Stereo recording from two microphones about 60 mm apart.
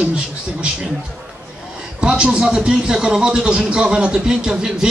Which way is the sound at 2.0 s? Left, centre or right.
Centre.